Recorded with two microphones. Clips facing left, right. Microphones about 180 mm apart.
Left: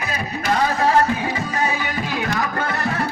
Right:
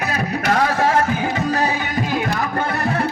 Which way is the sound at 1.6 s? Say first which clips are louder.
Right 2 dB; 45° right (ahead or behind).